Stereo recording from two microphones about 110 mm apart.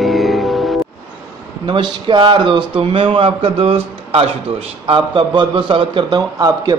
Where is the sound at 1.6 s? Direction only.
45° right (ahead or behind).